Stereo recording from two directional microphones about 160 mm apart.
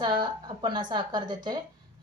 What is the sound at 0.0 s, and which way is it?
Speech, 30° right (ahead or behind).